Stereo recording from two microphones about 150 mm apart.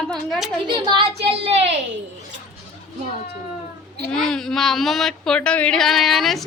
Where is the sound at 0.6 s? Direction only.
35° right (ahead or behind).